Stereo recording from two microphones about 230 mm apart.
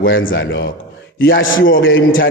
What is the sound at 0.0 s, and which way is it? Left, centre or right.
A man's voice, left.